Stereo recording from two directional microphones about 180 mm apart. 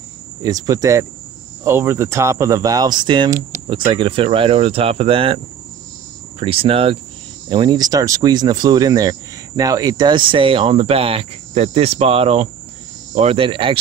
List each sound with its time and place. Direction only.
0.4 s speech: 20° right (ahead or behind)
6.4 s speech: 30° right (ahead or behind)